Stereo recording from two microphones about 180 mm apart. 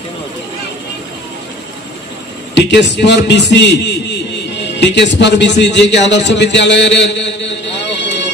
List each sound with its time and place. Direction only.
2.5 s a man's voice: 75° left (ahead or behind)